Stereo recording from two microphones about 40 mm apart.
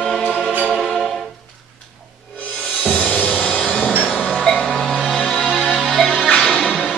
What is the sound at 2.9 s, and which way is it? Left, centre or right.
Music, left.